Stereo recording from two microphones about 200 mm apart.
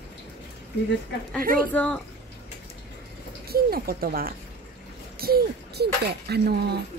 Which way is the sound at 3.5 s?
50° right (ahead or behind).